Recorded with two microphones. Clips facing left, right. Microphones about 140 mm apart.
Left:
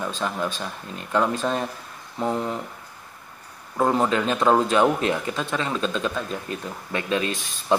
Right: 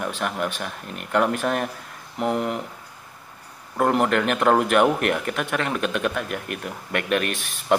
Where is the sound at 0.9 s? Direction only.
70° right (ahead or behind).